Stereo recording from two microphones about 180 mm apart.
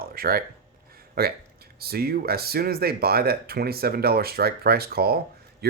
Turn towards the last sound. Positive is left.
turn(degrees=-60)  # may be behind; listen again after turning